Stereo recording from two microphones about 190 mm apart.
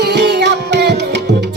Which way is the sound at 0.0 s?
60° right (ahead or behind).